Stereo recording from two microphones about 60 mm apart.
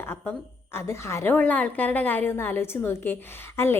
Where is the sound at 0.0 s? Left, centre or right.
Left.